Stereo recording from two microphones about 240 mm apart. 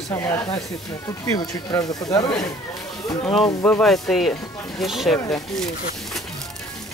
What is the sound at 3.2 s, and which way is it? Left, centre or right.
Speech, centre.